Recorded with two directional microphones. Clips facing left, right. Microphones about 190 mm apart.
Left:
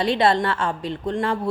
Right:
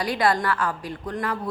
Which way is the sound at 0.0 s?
25° left (ahead or behind).